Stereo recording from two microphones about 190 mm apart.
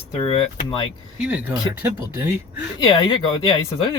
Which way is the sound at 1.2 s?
10° right (ahead or behind).